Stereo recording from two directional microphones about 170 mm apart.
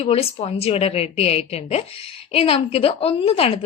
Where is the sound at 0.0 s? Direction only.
35° left (ahead or behind).